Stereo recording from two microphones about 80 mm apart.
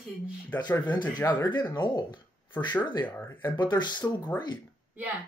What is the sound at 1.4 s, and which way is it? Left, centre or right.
Speech, left.